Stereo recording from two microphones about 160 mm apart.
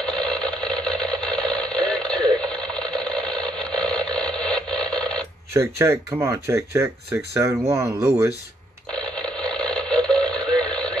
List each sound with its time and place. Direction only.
0.0 s a sound: 5° left (ahead or behind)
5.5 s speech: 15° right (ahead or behind)
8.9 s radio: 5° left (ahead or behind)